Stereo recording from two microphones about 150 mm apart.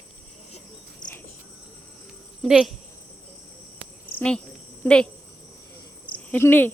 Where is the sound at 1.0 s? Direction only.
30° left (ahead or behind).